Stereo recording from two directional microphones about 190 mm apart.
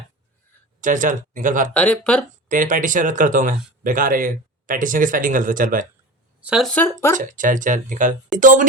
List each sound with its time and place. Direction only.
0.8 s speech: 45° right (ahead or behind)
1.7 s speech: 5° left (ahead or behind)
2.5 s speech: 45° right (ahead or behind)
6.4 s speech: centre (ahead or behind)
7.2 s speech: 45° right (ahead or behind)